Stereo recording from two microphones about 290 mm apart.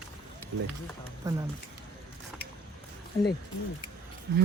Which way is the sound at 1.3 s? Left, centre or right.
Centre.